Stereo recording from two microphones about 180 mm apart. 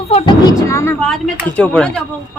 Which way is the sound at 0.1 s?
35° left (ahead or behind).